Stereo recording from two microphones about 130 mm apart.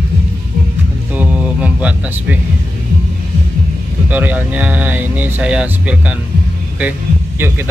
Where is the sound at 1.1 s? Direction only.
10° right (ahead or behind).